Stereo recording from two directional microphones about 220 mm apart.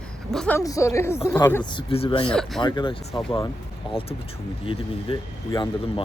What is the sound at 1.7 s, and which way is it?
Speech, 25° left (ahead or behind).